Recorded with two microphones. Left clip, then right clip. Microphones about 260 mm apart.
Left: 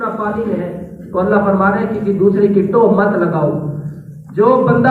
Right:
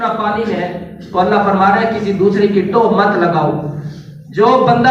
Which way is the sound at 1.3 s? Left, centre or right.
Right.